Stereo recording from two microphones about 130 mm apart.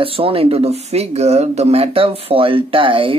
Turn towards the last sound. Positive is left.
turn(degrees=-40)  # may be behind; listen again after turning